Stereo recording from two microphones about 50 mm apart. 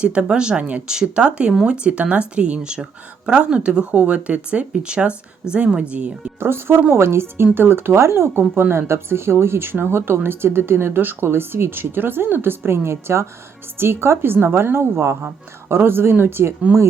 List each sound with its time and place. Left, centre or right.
0.0 s speech: right
6.4 s speech: right
8.3 s speech: right
8.7 s speech: right